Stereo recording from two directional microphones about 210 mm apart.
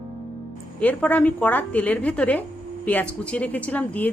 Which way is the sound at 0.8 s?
5° left (ahead or behind).